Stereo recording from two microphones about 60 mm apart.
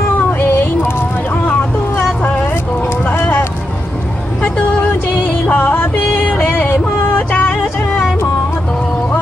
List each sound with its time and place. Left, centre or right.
1.3 s vehicle: left
3.1 s a sound: left
5.5 s music: left